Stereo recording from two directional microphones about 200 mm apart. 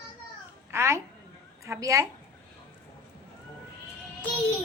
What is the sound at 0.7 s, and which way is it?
A woman's voice, 15° right (ahead or behind).